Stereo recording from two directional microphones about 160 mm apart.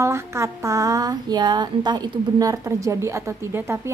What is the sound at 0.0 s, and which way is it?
Speech, 15° right (ahead or behind).